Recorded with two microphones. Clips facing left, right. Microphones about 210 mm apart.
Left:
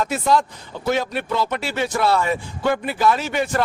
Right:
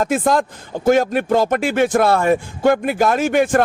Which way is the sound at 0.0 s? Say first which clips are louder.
Right 3 dB; 50° right (ahead or behind).